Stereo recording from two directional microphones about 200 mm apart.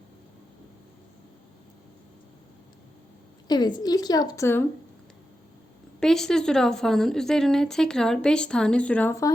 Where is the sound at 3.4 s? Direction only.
20° left (ahead or behind).